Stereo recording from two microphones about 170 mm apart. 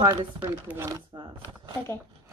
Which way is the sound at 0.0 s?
25° right (ahead or behind).